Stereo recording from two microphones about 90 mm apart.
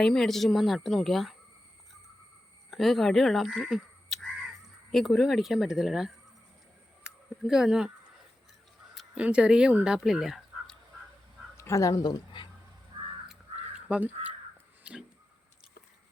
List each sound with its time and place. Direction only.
0.0 s a woman's voice: 5° left (ahead or behind)
2.6 s speech: centre (ahead or behind)
7.0 s a sound: 5° right (ahead or behind)
9.1 s speech: 15° right (ahead or behind)
11.5 s speech: 35° left (ahead or behind); by 12.5 s 55° left (ahead or behind)
13.7 s crow: 10° right (ahead or behind)
14.8 s a sound: 15° right (ahead or behind)